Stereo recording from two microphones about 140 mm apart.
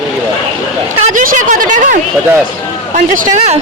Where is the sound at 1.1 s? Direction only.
65° right (ahead or behind); by 3.6 s 50° right (ahead or behind).